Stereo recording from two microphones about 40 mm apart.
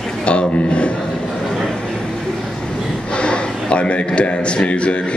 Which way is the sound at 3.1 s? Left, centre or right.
Left.